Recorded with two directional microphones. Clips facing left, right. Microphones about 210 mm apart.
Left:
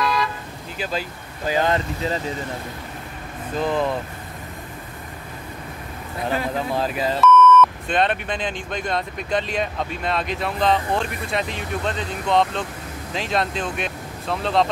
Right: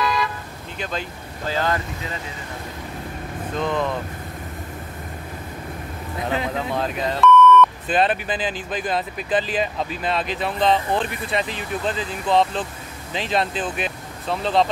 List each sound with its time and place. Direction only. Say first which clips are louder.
0.0 s vehicle: even; centre (ahead or behind)
0.7 s speech: left 2 dB; 5° left (ahead or behind)
1.5 s speech: left 3 dB; 20° left (ahead or behind)
3.5 s speech: left 2 dB; 5° left (ahead or behind)
6.7 s speech: left 2 dB; centre (ahead or behind)